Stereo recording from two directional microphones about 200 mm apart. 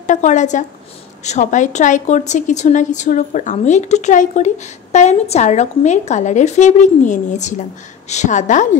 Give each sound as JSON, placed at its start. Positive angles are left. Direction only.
{"t": 0.0, "sound": "a woman's voice", "side_deg": 35}